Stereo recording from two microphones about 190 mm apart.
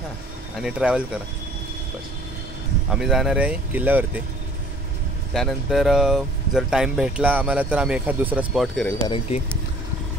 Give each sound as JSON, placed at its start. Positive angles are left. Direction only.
{"t": 0.6, "sound": "speech", "side_deg": -5}
{"t": 2.9, "sound": "speech", "side_deg": 0}
{"t": 5.3, "sound": "speech", "side_deg": 0}
{"t": 9.0, "sound": "speech", "side_deg": 30}